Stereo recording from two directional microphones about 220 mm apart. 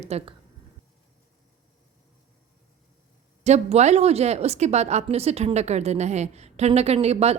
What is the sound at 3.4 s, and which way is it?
A woman's voice, 30° right (ahead or behind).